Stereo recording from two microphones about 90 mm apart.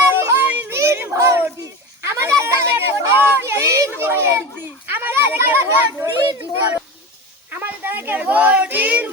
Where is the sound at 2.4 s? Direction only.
30° right (ahead or behind).